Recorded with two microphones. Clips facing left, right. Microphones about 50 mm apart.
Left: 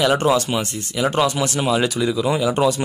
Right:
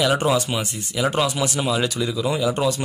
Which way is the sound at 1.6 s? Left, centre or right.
Left.